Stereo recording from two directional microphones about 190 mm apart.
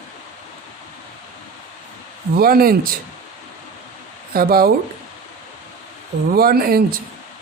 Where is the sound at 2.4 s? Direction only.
50° right (ahead or behind).